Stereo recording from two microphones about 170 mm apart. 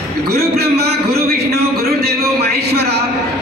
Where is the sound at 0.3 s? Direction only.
65° right (ahead or behind).